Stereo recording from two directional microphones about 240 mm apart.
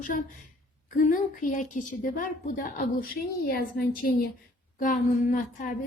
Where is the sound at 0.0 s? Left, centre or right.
Left.